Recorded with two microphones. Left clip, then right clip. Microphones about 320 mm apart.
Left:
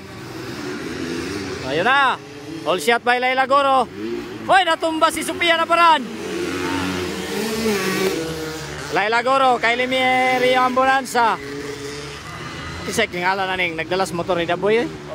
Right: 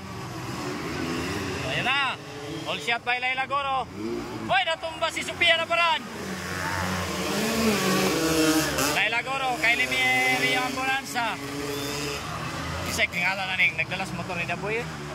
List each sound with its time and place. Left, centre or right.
1.7 s speech: centre
8.9 s speech: centre
12.9 s speech: centre